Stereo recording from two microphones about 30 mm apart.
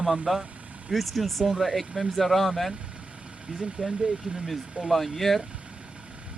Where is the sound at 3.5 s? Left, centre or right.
Right.